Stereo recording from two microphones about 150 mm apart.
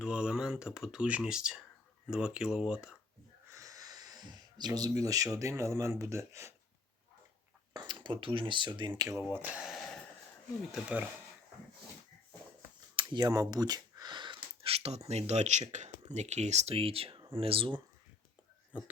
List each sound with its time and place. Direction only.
0.0 s speech: 5° right (ahead or behind)
3.5 s speech: 20° right (ahead or behind)
7.7 s speech: 30° right (ahead or behind)
9.3 s speech: 10° right (ahead or behind)
13.0 s speech: 30° right (ahead or behind)